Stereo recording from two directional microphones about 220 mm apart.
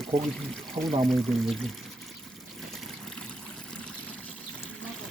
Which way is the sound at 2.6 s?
Centre (ahead or behind).